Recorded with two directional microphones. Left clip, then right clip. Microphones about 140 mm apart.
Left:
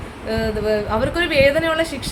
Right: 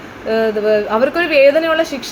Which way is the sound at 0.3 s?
10° left (ahead or behind).